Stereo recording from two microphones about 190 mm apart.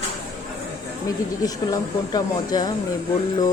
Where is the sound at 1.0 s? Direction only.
20° left (ahead or behind).